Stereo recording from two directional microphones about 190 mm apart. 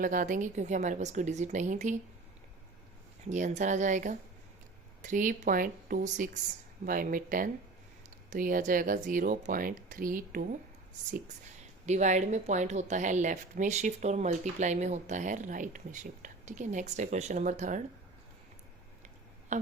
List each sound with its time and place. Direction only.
0.0 s a woman's voice: 45° right (ahead or behind)
3.2 s a woman's voice: 40° right (ahead or behind)
11.9 s a woman's voice: 40° right (ahead or behind)